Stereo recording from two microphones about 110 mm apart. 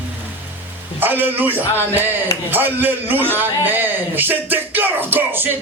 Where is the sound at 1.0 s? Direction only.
15° right (ahead or behind).